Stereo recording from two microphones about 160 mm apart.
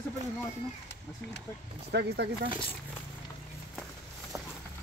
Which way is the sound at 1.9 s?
90° right.